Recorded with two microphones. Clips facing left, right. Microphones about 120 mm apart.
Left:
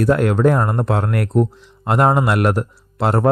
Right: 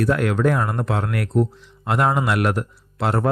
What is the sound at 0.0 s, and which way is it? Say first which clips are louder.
Speech: left 4 dB; 35° left (ahead or behind).